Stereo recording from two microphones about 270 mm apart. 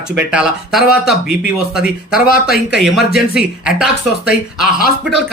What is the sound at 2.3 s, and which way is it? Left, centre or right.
Speech, left.